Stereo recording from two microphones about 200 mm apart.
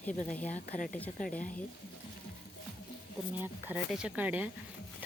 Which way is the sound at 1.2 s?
45° left (ahead or behind).